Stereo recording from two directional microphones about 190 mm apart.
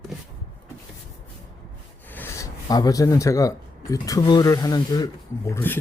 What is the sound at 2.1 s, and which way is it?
Speech, 10° left (ahead or behind).